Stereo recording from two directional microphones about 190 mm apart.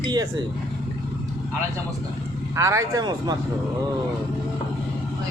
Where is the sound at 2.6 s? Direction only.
15° right (ahead or behind).